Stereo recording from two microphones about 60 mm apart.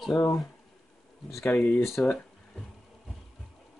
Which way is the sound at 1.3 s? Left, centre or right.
Left.